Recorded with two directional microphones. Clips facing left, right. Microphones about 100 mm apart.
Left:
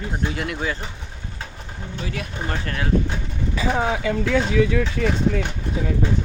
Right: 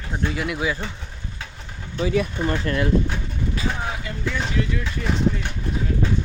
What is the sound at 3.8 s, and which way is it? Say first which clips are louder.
Speech: left 7 dB; 90° left.